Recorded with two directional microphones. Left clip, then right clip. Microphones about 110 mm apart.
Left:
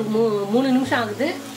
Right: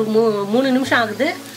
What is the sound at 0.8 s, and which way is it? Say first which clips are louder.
Speech: right 5 dB; 40° right (ahead or behind).